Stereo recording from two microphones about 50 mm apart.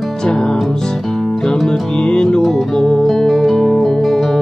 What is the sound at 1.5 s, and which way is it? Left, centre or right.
Music, centre.